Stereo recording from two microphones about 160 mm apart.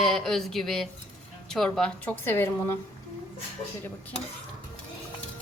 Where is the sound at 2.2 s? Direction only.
15° left (ahead or behind).